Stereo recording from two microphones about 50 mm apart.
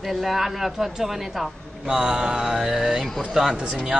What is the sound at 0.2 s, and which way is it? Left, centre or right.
A man's voice, centre.